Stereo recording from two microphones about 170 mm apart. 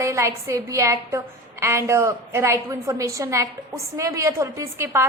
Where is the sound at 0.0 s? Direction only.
15° right (ahead or behind).